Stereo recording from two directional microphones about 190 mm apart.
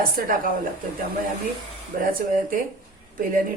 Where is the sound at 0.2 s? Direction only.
50° right (ahead or behind).